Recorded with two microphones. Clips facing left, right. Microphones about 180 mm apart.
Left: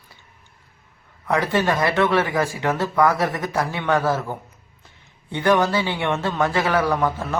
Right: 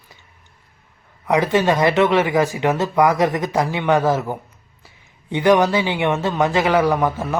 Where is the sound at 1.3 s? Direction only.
15° right (ahead or behind).